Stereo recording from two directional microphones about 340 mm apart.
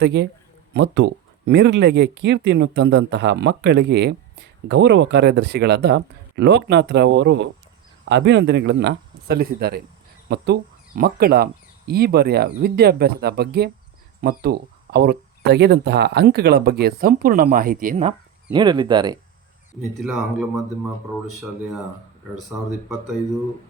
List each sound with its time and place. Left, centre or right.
0.0 s speech: right; by 19.2 s centre
20.0 s speech: centre